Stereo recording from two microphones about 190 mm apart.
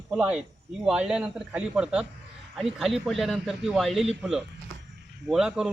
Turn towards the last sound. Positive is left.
turn(degrees=-5)  # may be behind; listen again after turning